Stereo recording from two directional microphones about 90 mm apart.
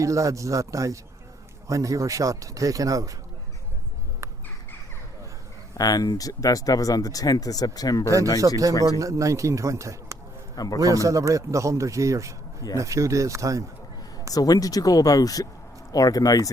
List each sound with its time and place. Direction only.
0.0 s a man's voice: 35° right (ahead or behind)
4.2 s crow: 35° right (ahead or behind)
5.7 s speech: 45° left (ahead or behind)
9.0 s a man's voice: 35° right (ahead or behind)
10.5 s a man's voice: 45° left (ahead or behind)
10.8 s a man's voice: 40° right (ahead or behind)
14.3 s speech: 45° left (ahead or behind)